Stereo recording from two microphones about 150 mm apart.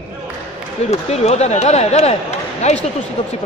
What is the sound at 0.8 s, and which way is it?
Speech, 45° left (ahead or behind).